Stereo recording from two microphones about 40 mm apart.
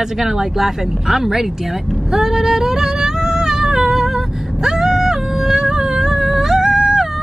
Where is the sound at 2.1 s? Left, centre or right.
Centre.